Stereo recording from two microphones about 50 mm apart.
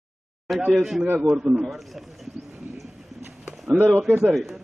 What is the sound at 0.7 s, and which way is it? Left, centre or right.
Wind instrument, centre.